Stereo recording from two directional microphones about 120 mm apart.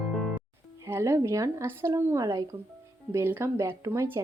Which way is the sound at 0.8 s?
20° right (ahead or behind).